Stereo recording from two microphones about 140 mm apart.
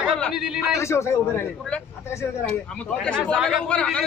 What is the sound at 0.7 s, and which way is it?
Speech, 20° left (ahead or behind).